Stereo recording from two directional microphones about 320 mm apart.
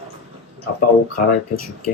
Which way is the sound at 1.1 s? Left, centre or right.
Left.